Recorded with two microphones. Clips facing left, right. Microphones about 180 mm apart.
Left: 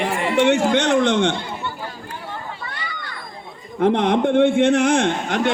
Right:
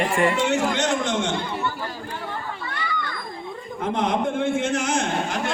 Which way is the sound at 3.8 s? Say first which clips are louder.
Left 7 dB; 65° left (ahead or behind).